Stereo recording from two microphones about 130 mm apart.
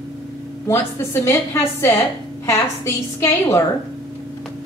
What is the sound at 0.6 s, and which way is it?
A woman's voice, 20° left (ahead or behind).